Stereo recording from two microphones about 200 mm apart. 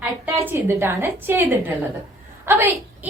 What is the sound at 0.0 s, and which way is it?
A woman's voice, 10° right (ahead or behind).